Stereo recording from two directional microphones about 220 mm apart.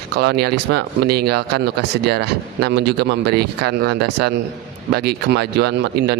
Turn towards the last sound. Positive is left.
turn(degrees=-50)  # may be behind; listen again after turning